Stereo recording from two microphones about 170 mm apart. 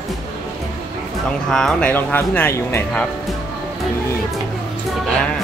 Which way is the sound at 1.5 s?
5° left (ahead or behind).